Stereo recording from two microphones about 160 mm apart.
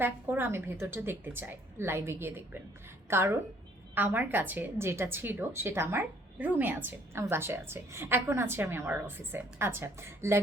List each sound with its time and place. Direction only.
0.0 s a woman's voice: 15° right (ahead or behind)